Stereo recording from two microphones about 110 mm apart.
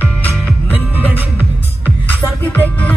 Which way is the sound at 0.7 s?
15° right (ahead or behind).